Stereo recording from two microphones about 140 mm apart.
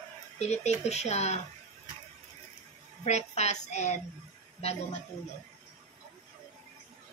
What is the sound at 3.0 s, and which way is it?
Speech, 50° left (ahead or behind).